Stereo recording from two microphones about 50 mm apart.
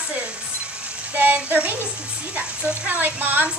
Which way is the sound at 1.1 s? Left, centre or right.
Right.